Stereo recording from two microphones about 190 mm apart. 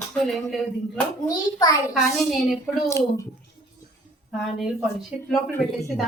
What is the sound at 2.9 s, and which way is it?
Speech, 15° left (ahead or behind).